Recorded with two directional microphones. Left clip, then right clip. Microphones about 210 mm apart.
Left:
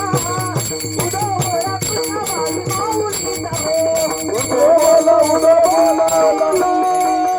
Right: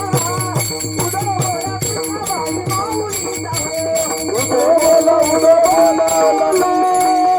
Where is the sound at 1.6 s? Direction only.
5° left (ahead or behind).